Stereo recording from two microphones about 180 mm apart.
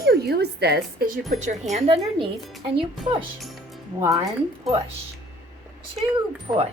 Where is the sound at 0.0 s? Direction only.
60° right (ahead or behind).